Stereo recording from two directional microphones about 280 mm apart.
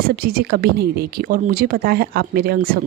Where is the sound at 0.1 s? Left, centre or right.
Right.